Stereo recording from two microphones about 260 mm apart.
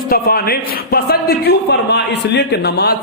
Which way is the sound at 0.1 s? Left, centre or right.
Left.